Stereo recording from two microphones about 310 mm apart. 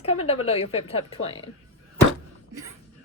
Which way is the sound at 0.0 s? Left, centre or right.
Centre.